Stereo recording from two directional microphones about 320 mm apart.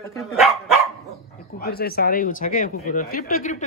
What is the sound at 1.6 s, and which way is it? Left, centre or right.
Speech, left.